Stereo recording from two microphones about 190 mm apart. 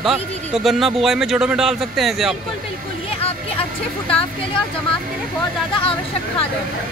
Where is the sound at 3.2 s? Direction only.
30° left (ahead or behind).